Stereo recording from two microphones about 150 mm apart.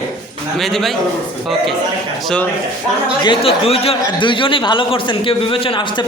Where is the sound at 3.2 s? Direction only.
40° left (ahead or behind).